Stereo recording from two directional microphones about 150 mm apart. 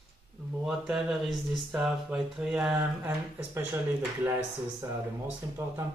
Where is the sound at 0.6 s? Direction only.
5° right (ahead or behind).